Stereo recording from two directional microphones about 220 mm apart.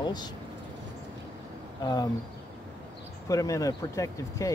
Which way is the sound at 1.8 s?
20° left (ahead or behind).